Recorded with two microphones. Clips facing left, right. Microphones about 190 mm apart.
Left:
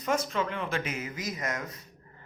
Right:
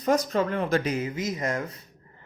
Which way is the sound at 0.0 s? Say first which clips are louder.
Right 6 dB; 40° right (ahead or behind).